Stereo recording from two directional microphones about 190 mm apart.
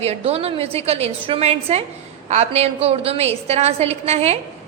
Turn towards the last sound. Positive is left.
turn(degrees=-35)  # may be behind; listen again after turning